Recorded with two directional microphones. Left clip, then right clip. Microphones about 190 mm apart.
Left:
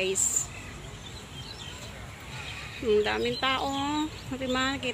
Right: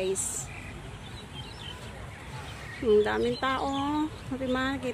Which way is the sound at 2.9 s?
15° right (ahead or behind).